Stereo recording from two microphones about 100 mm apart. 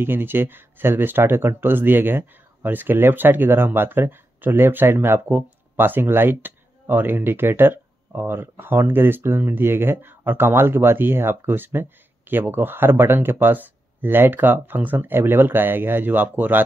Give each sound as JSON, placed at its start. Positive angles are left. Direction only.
{"t": 0.0, "sound": "speech", "side_deg": -20}